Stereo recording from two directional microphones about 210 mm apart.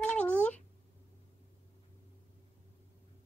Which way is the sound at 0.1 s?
5° left (ahead or behind).